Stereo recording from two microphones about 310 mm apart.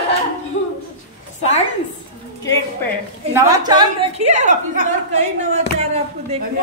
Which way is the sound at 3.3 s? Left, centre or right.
Centre.